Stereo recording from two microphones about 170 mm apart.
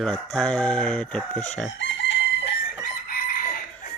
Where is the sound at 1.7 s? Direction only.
90° left.